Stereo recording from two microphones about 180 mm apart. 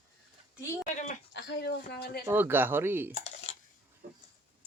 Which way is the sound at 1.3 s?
70° left (ahead or behind).